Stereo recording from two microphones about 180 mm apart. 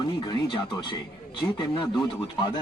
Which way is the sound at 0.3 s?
25° left (ahead or behind).